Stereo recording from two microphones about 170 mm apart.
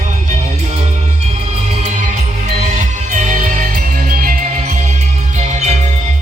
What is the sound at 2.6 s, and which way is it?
Music, 45° right (ahead or behind).